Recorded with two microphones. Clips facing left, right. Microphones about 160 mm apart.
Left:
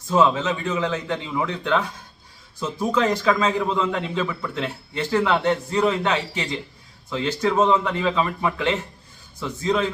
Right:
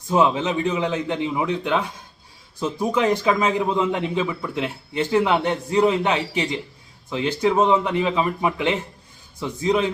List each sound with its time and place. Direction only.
0.1 s a man's voice: 15° right (ahead or behind)